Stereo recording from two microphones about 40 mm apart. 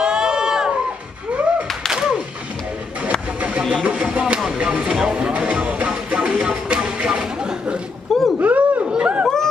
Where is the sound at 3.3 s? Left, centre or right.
Right.